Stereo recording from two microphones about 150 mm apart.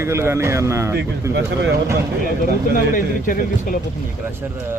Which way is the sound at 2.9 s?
65° left (ahead or behind).